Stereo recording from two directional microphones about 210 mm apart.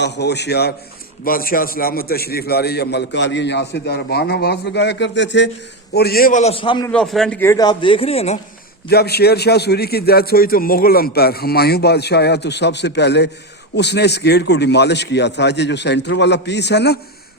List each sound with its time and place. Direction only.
0.0 s a man's voice: 55° left (ahead or behind); by 6.9 s 20° left (ahead or behind)
6.9 s speech: centre (ahead or behind); by 8.4 s 30° left (ahead or behind)
8.9 s a man's voice: 50° left (ahead or behind)